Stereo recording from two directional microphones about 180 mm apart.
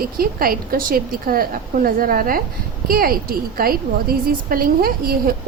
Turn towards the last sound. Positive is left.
turn(degrees=-55)  # may be behind; listen again after turning